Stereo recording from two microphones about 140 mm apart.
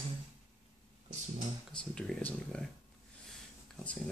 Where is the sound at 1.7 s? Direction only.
5° left (ahead or behind).